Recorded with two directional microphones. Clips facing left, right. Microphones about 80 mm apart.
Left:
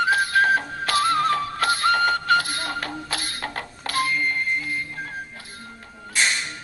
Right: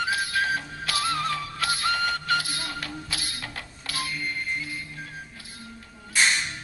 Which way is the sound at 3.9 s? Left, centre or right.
Left.